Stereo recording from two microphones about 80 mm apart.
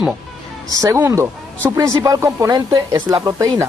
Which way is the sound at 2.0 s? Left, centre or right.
Right.